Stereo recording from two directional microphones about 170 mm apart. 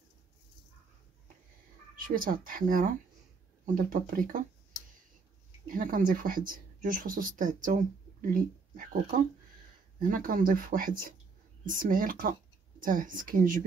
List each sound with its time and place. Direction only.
2.0 s speech: 55° right (ahead or behind)
5.7 s speech: 55° right (ahead or behind)